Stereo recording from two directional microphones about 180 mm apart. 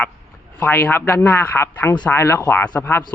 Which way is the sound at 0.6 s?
10° left (ahead or behind).